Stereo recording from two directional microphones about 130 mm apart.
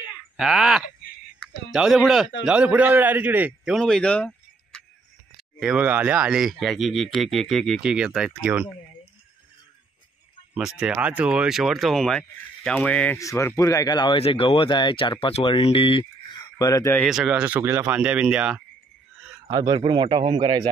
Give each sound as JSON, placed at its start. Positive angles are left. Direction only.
{"t": 0.1, "sound": "a sound", "side_deg": -5}
{"t": 1.7, "sound": "a man's voice", "side_deg": -5}
{"t": 3.7, "sound": "a sound", "side_deg": 5}
{"t": 5.6, "sound": "speech", "side_deg": -10}
{"t": 10.8, "sound": "speech", "side_deg": -10}
{"t": 13.2, "sound": "speech", "side_deg": 25}
{"t": 17.0, "sound": "a man's voice", "side_deg": -5}
{"t": 19.6, "sound": "a man's voice", "side_deg": -35}